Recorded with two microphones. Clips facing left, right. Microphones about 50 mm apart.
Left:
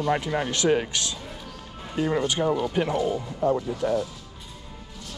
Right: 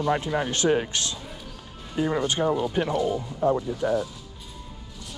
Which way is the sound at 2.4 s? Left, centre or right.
Right.